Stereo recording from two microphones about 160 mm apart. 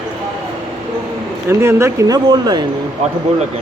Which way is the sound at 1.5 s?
15° right (ahead or behind).